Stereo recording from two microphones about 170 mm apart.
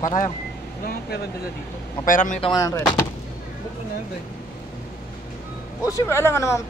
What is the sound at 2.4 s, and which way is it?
Speech, 20° left (ahead or behind).